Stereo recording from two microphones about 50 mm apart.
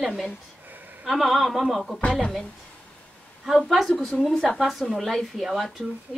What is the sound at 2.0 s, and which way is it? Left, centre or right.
Speech, left.